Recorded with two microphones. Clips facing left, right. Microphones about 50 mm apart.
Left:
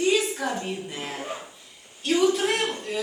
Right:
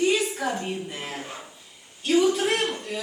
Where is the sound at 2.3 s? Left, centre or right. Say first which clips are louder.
Even; centre.